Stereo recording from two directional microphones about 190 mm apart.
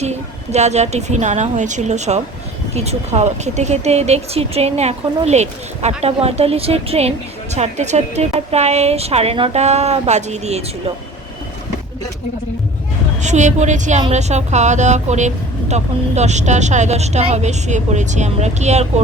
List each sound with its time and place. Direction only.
0.0 s speech: 35° right (ahead or behind)
13.2 s speech: 40° right (ahead or behind)